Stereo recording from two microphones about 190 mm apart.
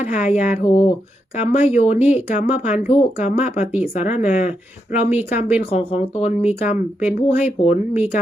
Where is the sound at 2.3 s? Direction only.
35° left (ahead or behind).